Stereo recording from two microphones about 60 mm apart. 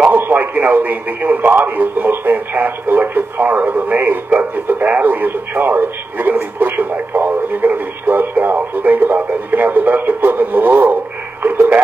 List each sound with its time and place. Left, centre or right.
0.1 s speech: right